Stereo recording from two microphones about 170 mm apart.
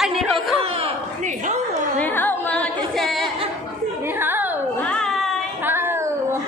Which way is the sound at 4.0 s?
10° right (ahead or behind).